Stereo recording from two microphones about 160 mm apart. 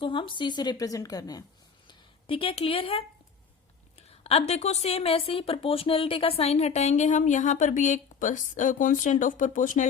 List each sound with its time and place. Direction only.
0.0 s a woman's voice: 30° left (ahead or behind)
1.9 s a woman's voice: 35° left (ahead or behind)
4.1 s a woman's voice: 40° left (ahead or behind); by 9.8 s 55° left (ahead or behind)